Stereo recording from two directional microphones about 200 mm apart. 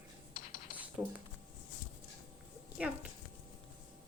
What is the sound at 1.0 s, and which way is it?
Speech, 20° right (ahead or behind).